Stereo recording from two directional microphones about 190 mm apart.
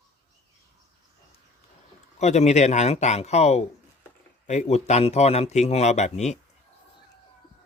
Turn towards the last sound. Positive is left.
turn(degrees=35)  # may be behind; listen again after turning